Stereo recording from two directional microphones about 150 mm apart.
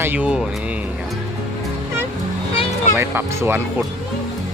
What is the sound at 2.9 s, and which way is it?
Speech, 15° right (ahead or behind).